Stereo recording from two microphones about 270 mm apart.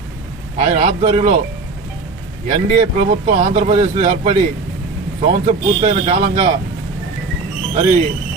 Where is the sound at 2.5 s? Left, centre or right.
Right.